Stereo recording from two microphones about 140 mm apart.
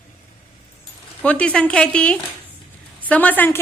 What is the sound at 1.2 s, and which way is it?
A woman's voice, 10° left (ahead or behind).